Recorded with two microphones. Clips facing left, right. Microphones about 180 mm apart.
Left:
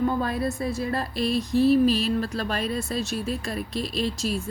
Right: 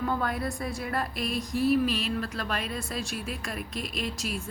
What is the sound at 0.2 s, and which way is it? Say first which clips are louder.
A woman's voice: left 5 dB; 25° left (ahead or behind).